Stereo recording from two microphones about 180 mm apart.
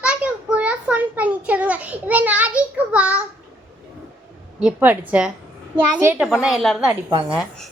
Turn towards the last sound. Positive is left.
turn(degrees=-25)  # may be behind; listen again after turning